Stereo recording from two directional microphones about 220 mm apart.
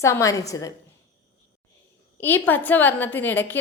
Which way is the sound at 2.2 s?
10° left (ahead or behind).